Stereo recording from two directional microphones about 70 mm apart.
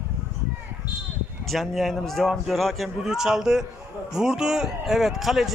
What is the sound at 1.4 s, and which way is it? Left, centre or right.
Speech, centre.